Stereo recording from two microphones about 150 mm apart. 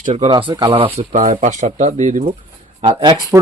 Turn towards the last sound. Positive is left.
turn(degrees=-35)  # may be behind; listen again after turning